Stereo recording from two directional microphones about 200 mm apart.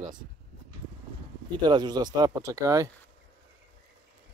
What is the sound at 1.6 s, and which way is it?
Speech, 20° right (ahead or behind).